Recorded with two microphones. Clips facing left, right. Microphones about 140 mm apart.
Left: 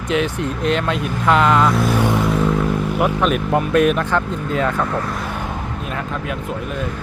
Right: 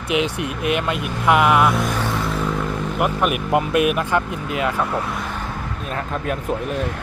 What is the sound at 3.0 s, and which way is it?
Speech, 10° right (ahead or behind).